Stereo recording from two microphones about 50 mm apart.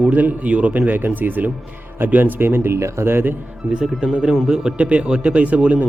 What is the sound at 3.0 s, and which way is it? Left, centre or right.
Speech, right.